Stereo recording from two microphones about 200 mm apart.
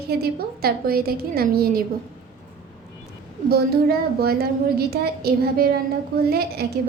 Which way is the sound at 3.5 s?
50° right (ahead or behind).